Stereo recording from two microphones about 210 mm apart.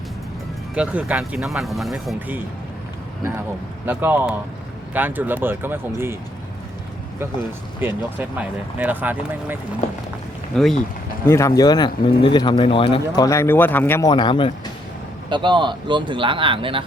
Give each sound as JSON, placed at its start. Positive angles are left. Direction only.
{"t": 0.8, "sound": "speech", "side_deg": -5}
{"t": 3.8, "sound": "speech", "side_deg": -10}
{"t": 7.8, "sound": "speech", "side_deg": -10}
{"t": 11.3, "sound": "speech", "side_deg": 15}
{"t": 14.1, "sound": "speech", "side_deg": 20}
{"t": 15.3, "sound": "speech", "side_deg": -20}